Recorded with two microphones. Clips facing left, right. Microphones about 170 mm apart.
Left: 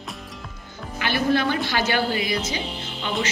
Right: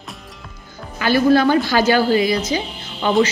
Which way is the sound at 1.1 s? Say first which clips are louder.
Right 8 dB; 40° right (ahead or behind).